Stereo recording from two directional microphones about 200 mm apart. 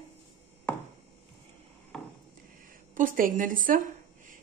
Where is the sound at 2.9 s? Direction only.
40° right (ahead or behind).